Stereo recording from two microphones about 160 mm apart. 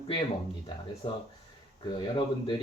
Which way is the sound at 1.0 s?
30° left (ahead or behind).